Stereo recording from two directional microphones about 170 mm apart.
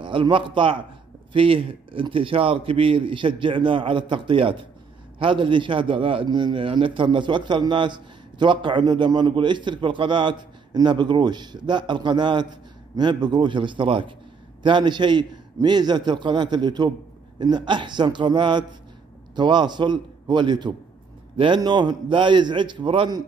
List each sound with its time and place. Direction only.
0.0 s a man's voice: 30° right (ahead or behind)